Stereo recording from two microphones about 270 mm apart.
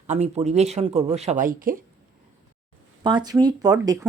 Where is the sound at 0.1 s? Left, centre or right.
Right.